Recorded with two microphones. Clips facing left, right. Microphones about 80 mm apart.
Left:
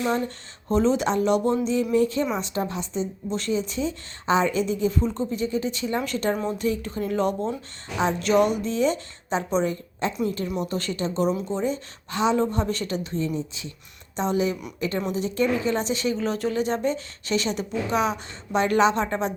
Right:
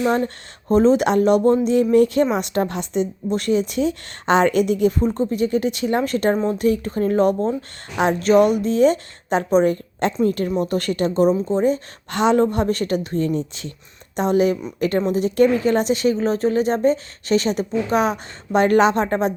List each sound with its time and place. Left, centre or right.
0.7 s speech: right
2.3 s a woman's voice: right
3.2 s a woman's voice: right
5.3 s a woman's voice: right
12.1 s a woman's voice: right
12.4 s a woman's voice: right
14.2 s speech: right